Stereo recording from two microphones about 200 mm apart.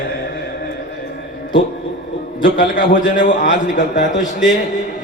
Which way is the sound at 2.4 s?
40° left (ahead or behind).